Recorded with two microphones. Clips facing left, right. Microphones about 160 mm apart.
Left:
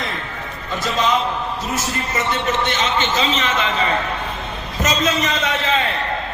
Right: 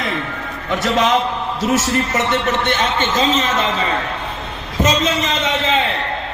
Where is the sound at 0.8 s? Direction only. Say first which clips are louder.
Right 3 dB; 75° right (ahead or behind).